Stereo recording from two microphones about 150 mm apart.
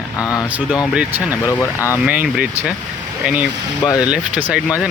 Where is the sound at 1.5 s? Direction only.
20° left (ahead or behind).